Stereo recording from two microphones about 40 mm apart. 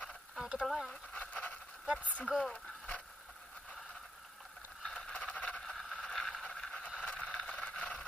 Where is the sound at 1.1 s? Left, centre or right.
Left.